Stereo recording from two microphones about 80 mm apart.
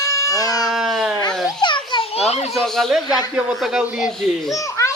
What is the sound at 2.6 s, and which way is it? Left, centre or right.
A man's voice, centre.